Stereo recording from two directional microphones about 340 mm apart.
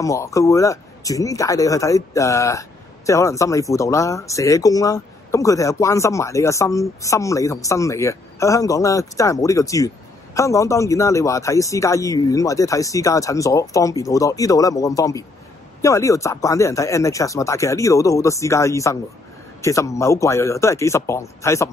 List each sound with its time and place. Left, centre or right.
0.0 s speech: centre